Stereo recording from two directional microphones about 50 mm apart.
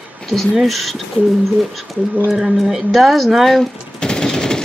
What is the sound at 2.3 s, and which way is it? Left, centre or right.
A woman's voice, centre.